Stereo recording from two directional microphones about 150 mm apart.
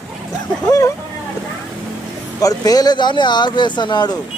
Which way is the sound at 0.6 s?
25° left (ahead or behind).